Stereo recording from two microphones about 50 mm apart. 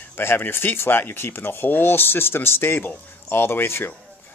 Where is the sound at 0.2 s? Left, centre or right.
Left.